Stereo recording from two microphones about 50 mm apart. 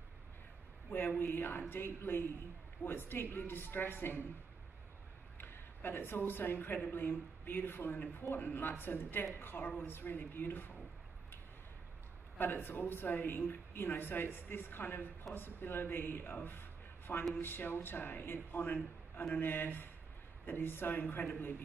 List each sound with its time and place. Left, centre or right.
0.9 s speech: left
5.4 s a woman's voice: left
12.4 s speech: left
16.4 s a sound: left
17.3 s speech: left